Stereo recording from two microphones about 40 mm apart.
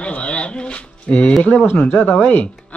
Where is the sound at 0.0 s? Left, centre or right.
Left.